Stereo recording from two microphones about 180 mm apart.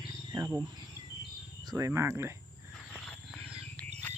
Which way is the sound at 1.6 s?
20° right (ahead or behind).